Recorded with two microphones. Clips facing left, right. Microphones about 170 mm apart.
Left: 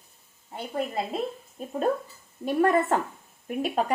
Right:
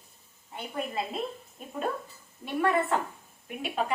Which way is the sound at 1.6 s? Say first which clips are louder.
Left 10 dB; 35° left (ahead or behind).